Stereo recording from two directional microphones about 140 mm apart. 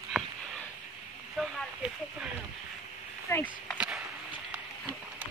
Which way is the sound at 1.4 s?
5° right (ahead or behind).